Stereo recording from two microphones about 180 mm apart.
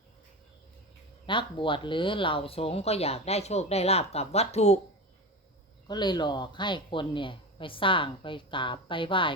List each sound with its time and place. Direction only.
1.3 s speech: 25° left (ahead or behind)
5.9 s speech: 25° left (ahead or behind)